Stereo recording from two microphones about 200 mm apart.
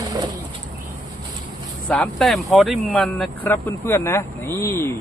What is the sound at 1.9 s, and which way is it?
Speech, 5° left (ahead or behind).